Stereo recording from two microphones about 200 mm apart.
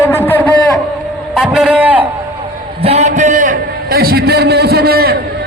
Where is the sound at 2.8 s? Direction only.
35° right (ahead or behind); by 5.1 s 50° right (ahead or behind).